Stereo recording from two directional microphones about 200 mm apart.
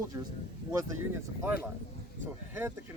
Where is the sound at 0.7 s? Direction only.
10° right (ahead or behind).